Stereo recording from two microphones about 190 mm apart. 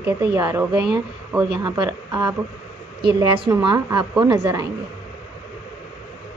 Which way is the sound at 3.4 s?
25° right (ahead or behind).